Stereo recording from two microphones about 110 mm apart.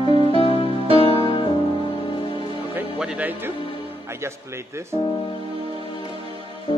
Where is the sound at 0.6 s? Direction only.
60° right (ahead or behind).